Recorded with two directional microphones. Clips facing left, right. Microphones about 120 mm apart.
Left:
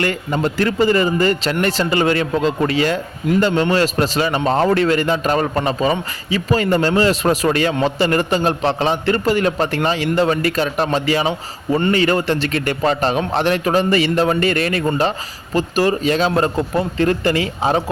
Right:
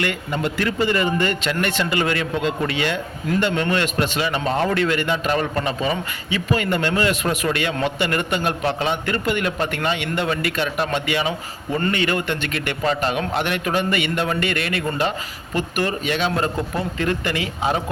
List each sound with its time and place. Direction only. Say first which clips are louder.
0.0 s a man's voice: left 4 dB; 40° left (ahead or behind)